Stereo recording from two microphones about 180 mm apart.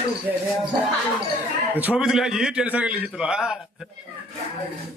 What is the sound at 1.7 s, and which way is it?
A man's voice, 10° right (ahead or behind).